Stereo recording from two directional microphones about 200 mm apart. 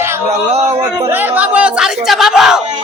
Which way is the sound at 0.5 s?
30° right (ahead or behind).